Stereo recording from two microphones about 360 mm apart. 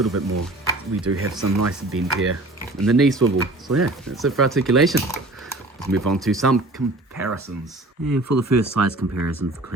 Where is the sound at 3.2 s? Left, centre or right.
Right.